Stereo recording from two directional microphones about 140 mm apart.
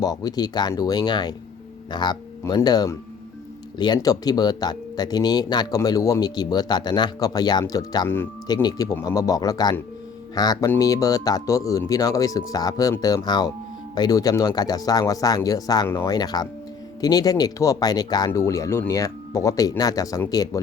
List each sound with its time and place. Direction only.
0.0 s speech: 30° left (ahead or behind)